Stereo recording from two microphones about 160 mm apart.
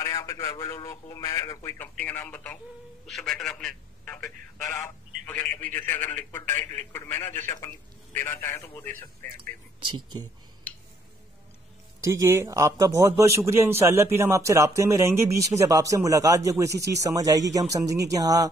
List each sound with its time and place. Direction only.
0.0 s a man's voice: 20° left (ahead or behind)
9.8 s speech: 30° right (ahead or behind)
12.1 s a man's voice: 20° right (ahead or behind)